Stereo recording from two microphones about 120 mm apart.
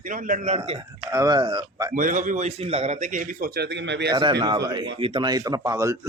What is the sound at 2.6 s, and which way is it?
Speech, 60° right (ahead or behind).